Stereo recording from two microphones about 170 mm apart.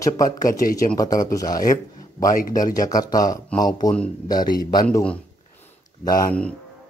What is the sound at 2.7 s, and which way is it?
Speech, 20° left (ahead or behind).